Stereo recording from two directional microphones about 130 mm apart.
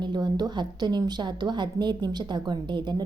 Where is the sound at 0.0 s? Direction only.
35° right (ahead or behind).